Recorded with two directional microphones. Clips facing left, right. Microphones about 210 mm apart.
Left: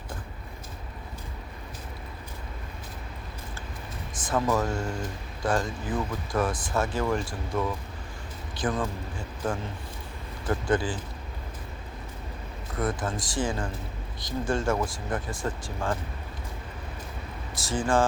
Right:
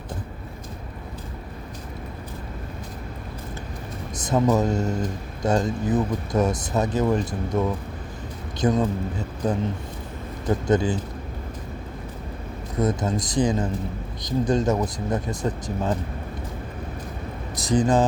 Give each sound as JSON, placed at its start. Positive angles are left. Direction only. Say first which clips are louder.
{"t": 4.3, "sound": "speech", "louder": "right 6 dB", "side_deg": -20}
{"t": 12.8, "sound": "speech", "louder": "right 6 dB", "side_deg": -20}
{"t": 17.5, "sound": "speech", "louder": "right 6 dB", "side_deg": -20}